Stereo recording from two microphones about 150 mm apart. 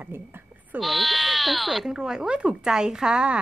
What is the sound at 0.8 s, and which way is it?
Speech, centre (ahead or behind).